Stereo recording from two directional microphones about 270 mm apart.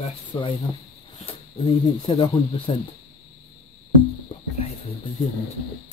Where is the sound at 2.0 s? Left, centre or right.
Centre.